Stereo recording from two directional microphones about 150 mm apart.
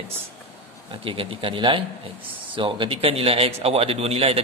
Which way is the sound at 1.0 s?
35° right (ahead or behind).